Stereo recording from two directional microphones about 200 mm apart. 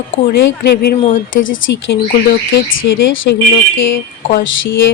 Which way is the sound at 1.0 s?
40° left (ahead or behind).